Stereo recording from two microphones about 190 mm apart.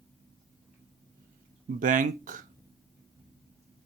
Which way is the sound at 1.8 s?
45° right (ahead or behind).